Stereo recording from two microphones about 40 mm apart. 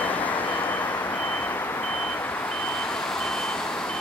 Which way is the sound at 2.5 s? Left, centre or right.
Left.